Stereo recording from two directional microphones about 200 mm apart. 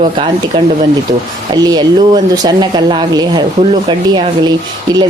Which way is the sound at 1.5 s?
20° right (ahead or behind).